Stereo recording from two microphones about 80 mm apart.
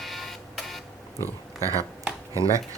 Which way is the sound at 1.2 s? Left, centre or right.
Right.